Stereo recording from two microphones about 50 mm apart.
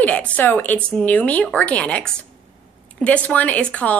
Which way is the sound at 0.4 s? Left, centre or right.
Left.